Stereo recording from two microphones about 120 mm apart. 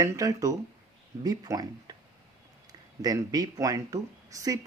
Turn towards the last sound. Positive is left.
turn(degrees=-30)  # may be behind; listen again after turning